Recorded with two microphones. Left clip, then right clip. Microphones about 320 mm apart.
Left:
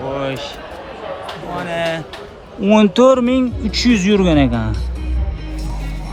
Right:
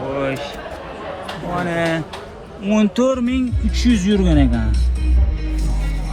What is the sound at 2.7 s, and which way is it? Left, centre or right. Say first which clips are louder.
Speech: left 7 dB; centre.